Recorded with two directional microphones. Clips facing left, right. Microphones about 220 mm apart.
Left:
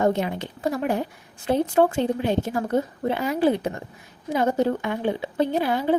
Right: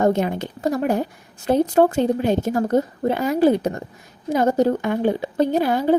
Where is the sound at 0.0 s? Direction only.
45° right (ahead or behind).